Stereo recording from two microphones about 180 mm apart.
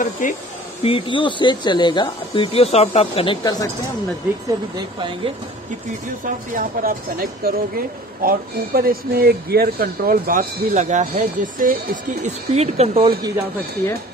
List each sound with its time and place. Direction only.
0.0 s speech: 45° left (ahead or behind)
0.8 s speech: 30° left (ahead or behind)
4.5 s speech: 25° right (ahead or behind)
6.2 s speech: 50° right (ahead or behind)